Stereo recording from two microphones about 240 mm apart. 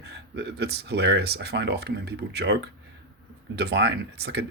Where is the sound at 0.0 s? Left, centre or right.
Right.